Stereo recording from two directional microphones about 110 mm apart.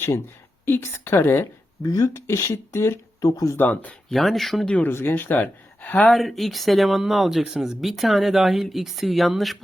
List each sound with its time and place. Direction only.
0.6 s speech: 20° left (ahead or behind)
3.6 s speech: 15° left (ahead or behind)
4.1 s speech: centre (ahead or behind)
4.7 s speech: 20° left (ahead or behind); by 9.6 s centre (ahead or behind)